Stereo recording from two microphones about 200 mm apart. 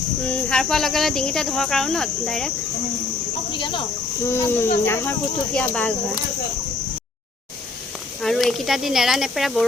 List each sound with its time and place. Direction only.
0.3 s speech: 5° left (ahead or behind)
3.5 s cricket: 25° left (ahead or behind)
4.3 s speech: 10° left (ahead or behind)
8.2 s speech: centre (ahead or behind)